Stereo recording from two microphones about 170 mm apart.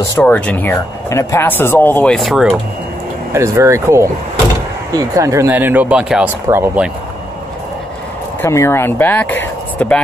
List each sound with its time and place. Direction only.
0.1 s speech: 10° left (ahead or behind)
3.3 s speech: 15° right (ahead or behind)
8.4 s speech: 15° left (ahead or behind)